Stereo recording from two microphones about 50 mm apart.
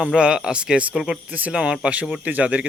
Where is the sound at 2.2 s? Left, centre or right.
Right.